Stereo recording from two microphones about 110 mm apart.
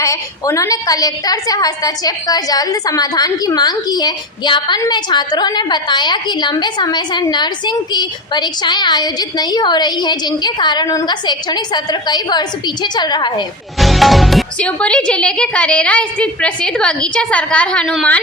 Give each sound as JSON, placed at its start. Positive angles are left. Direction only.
{"t": 0.0, "sound": "a woman's voice", "side_deg": 30}
{"t": 13.7, "sound": "music", "side_deg": 0}
{"t": 14.6, "sound": "a woman's voice", "side_deg": 10}